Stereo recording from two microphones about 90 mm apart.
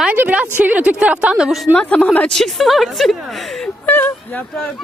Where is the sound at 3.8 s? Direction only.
20° left (ahead or behind).